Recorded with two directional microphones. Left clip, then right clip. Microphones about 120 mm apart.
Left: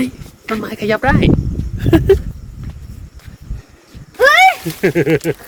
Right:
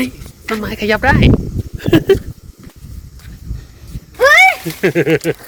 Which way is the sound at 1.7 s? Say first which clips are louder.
Even; 15° left (ahead or behind).